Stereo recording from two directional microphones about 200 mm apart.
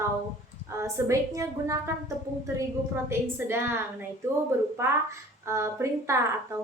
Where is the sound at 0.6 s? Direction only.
15° right (ahead or behind).